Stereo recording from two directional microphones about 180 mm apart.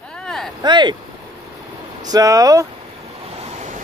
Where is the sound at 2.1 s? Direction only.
20° right (ahead or behind).